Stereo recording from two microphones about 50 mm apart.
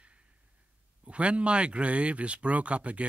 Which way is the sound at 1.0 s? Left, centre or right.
Right.